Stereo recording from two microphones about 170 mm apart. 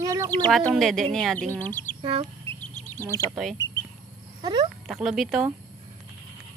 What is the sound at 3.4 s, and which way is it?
Speech, centre (ahead or behind).